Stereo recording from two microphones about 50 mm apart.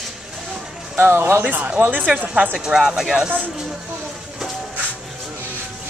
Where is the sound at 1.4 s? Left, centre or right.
Right.